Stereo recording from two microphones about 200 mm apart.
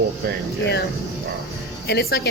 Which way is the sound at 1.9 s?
50° left (ahead or behind).